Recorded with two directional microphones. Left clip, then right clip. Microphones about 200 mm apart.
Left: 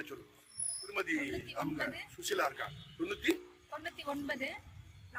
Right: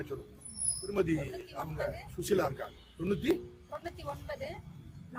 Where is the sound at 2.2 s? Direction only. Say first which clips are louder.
Right 3 dB; 30° right (ahead or behind).